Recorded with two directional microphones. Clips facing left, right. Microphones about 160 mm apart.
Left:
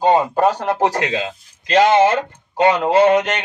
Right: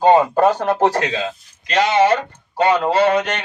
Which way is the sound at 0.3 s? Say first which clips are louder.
Right 1 dB; 15° left (ahead or behind).